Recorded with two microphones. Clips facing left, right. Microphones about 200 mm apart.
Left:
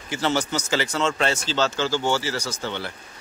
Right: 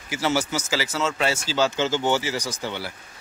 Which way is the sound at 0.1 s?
10° right (ahead or behind).